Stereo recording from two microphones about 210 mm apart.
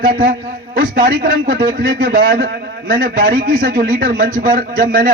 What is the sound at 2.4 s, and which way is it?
A man's voice, 40° right (ahead or behind).